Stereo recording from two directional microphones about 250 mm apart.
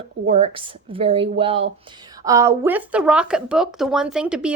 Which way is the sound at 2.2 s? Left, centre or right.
Centre.